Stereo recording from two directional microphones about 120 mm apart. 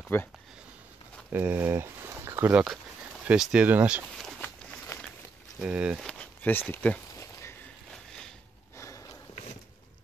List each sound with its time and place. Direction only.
0.1 s speech: 20° left (ahead or behind)
1.3 s speech: 15° right (ahead or behind)
4.4 s walk: 15° left (ahead or behind)
5.6 s speech: 10° right (ahead or behind)
5.9 s a sound: 5° left (ahead or behind)
6.7 s speech: 15° left (ahead or behind)
7.2 s a sound: 25° left (ahead or behind)
7.9 s a sound: 5° left (ahead or behind)
8.7 s sniff: 25° left (ahead or behind)